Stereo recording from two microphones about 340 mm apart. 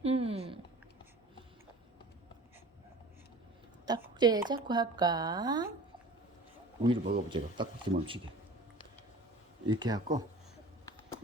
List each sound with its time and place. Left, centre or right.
0.0 s a sound: centre
3.8 s a woman's voice: centre
6.8 s a woman's voice: centre
9.6 s a woman's voice: centre